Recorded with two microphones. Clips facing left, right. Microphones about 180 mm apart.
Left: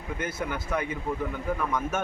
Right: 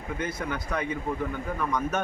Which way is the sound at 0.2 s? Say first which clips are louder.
Even; 5° left (ahead or behind).